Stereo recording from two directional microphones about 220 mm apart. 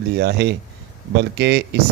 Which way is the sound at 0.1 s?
50° right (ahead or behind).